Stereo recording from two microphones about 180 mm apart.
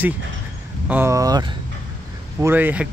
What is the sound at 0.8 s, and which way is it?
Speech, 10° right (ahead or behind).